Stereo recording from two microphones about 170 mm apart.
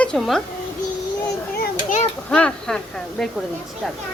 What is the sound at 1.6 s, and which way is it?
Children playing, 50° left (ahead or behind).